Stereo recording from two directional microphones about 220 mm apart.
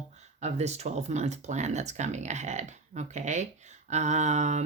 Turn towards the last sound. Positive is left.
turn(degrees=-30)  # may be behind; listen again after turning